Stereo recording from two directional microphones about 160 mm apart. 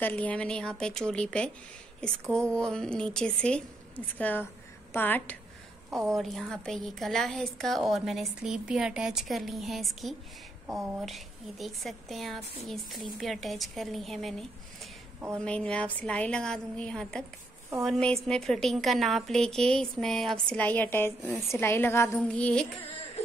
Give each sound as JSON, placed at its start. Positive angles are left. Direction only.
{"t": 0.0, "sound": "a woman's voice", "side_deg": 10}